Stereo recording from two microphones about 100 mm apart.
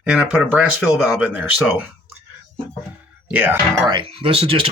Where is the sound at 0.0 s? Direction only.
15° right (ahead or behind).